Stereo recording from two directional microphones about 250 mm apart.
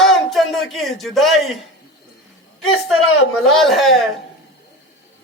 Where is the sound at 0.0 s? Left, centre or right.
Centre.